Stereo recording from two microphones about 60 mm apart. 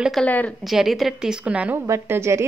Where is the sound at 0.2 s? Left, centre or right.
Left.